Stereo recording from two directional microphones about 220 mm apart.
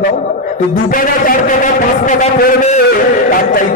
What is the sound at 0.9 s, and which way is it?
Speech, 35° left (ahead or behind).